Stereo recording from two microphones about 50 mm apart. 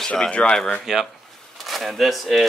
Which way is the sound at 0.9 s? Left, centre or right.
Centre.